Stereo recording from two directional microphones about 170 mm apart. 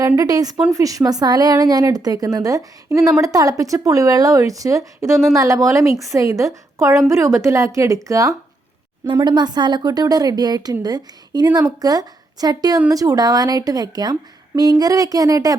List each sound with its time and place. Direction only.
0.2 s a woman's voice: 20° right (ahead or behind)